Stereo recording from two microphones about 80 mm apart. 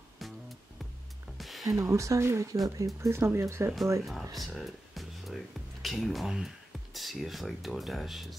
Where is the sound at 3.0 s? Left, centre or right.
Right.